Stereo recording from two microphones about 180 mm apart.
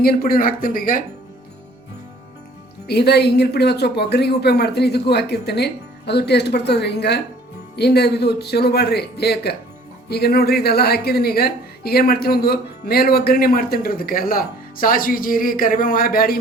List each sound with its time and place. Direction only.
0.0 s speech: 55° left (ahead or behind)
2.8 s a woman's voice: 65° left (ahead or behind)